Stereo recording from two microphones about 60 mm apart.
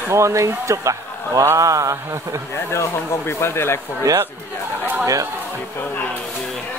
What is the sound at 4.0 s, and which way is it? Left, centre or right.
Speech, right.